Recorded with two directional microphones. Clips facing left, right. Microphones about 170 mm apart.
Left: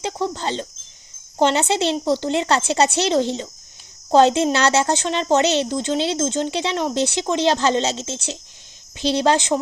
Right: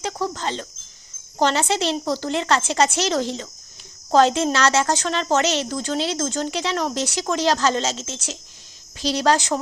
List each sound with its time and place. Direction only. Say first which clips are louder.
0.0 s speech: left 2 dB; 30° left (ahead or behind)